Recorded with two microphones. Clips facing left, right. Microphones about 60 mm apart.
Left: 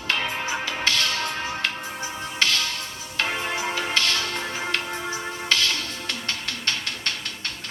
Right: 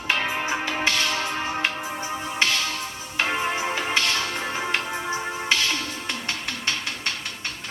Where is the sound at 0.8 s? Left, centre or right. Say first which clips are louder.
Left 1 dB; centre.